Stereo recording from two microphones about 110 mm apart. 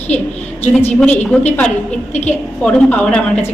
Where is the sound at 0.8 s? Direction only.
15° left (ahead or behind).